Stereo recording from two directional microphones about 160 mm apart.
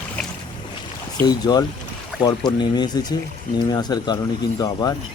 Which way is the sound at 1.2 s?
25° left (ahead or behind).